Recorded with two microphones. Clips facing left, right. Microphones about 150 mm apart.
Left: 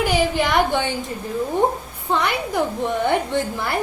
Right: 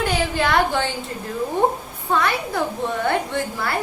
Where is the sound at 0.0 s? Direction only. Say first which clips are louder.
Left 2 dB; 10° left (ahead or behind).